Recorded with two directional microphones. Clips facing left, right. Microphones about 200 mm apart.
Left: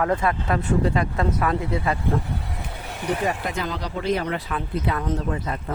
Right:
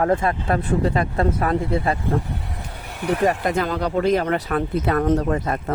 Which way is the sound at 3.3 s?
50° right (ahead or behind).